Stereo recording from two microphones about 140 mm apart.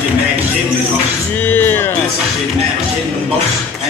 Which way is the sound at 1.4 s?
15° left (ahead or behind).